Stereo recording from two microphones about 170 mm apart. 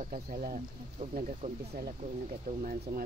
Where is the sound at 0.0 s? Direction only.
50° right (ahead or behind).